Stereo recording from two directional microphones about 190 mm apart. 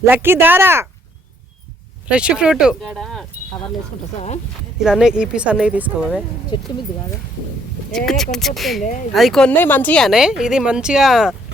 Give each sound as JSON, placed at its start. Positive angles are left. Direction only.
{"t": 0.0, "sound": "speech", "side_deg": -10}
{"t": 2.0, "sound": "speech", "side_deg": -5}
{"t": 4.8, "sound": "speech", "side_deg": -5}
{"t": 6.5, "sound": "speech", "side_deg": 25}
{"t": 8.0, "sound": "speech", "side_deg": 0}
{"t": 8.8, "sound": "speech", "side_deg": 40}
{"t": 9.1, "sound": "speech", "side_deg": 0}